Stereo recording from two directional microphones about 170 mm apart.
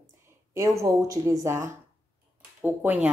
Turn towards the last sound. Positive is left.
turn(degrees=-10)  # may be behind; listen again after turning